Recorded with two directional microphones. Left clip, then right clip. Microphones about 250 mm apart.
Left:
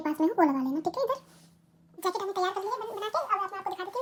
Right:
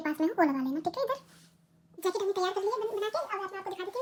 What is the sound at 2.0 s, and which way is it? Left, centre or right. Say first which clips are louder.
Gargling: even; centre.